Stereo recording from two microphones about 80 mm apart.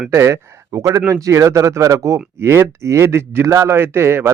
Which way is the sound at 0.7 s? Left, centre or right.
Right.